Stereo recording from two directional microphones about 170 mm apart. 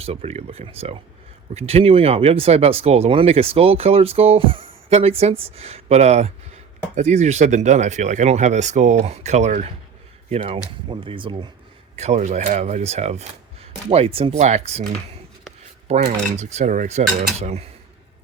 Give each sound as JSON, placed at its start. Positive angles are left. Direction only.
{"t": 0.0, "sound": "speech", "side_deg": -35}
{"t": 11.9, "sound": "speech", "side_deg": -40}
{"t": 15.9, "sound": "speech", "side_deg": -35}